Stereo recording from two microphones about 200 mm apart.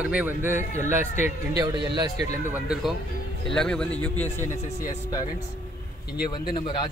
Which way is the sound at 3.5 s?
5° left (ahead or behind).